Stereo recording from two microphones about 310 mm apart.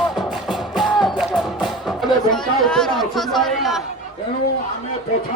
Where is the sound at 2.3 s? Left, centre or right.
Centre.